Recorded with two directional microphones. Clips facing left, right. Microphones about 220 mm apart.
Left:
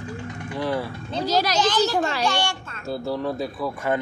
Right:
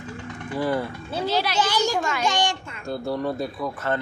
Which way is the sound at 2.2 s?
15° right (ahead or behind).